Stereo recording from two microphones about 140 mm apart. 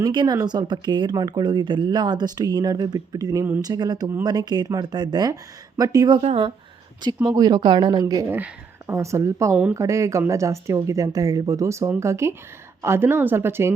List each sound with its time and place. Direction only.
0.0 s speech: 30° right (ahead or behind)
6.2 s speech: 45° right (ahead or behind)
7.3 s speech: 30° right (ahead or behind)
8.3 s speech: 15° right (ahead or behind)